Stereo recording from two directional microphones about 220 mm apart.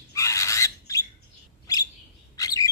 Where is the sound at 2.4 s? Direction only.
15° left (ahead or behind).